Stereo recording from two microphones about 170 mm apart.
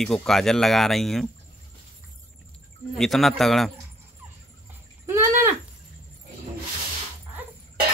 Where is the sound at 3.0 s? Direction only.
Centre (ahead or behind).